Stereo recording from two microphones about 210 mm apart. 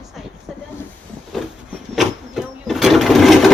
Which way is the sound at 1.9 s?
Centre (ahead or behind).